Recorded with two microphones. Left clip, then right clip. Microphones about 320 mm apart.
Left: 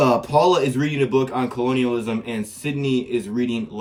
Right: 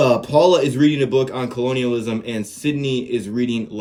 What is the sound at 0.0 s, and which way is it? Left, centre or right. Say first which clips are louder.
A man's voice: right 2 dB; centre.